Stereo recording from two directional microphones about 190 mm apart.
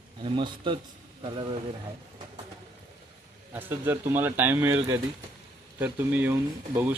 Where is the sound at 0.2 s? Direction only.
25° right (ahead or behind).